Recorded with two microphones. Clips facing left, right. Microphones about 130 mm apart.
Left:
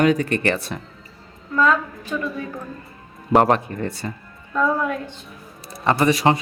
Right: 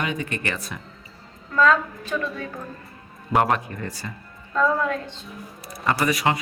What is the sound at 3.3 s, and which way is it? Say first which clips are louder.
Speech: left 5 dB; 35° left (ahead or behind).